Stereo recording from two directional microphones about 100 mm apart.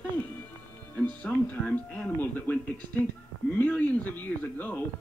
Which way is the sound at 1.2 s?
15° left (ahead or behind).